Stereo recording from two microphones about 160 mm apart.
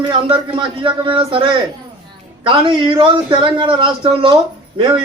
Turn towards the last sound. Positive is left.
turn(degrees=-30)  # may be behind; listen again after turning